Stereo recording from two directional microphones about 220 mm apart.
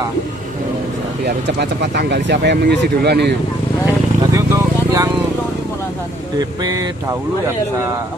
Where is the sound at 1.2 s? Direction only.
50° right (ahead or behind).